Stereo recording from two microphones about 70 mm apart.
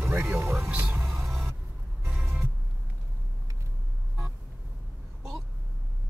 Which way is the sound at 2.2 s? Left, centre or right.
Right.